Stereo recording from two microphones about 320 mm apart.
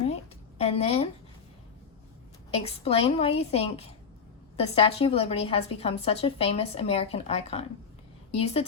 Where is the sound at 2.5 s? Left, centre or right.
Centre.